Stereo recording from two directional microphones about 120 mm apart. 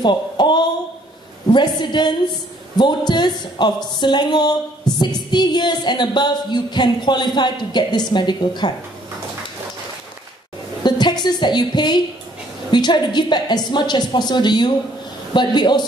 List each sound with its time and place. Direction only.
0.0 s a woman's voice: 40° left (ahead or behind)
10.8 s a woman's voice: 40° left (ahead or behind)